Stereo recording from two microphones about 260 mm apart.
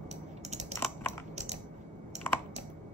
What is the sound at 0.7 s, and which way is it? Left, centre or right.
Typing, centre.